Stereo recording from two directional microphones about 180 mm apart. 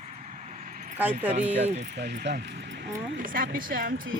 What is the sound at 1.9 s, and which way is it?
Speech, 65° right (ahead or behind).